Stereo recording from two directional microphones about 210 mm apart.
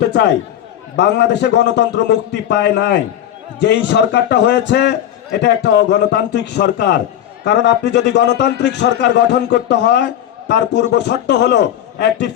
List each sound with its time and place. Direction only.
0.0 s a man's voice: 55° left (ahead or behind)